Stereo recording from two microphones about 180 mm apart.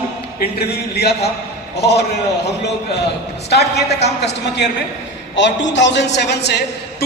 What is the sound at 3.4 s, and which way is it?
A man's voice, 65° left (ahead or behind).